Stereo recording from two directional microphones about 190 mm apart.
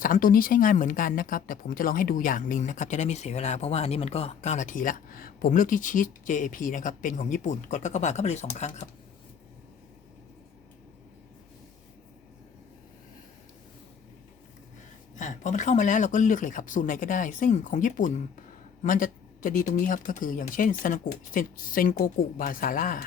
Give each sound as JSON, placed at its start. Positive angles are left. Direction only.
{"t": 0.0, "sound": "speech", "side_deg": 50}
{"t": 15.1, "sound": "speech", "side_deg": 40}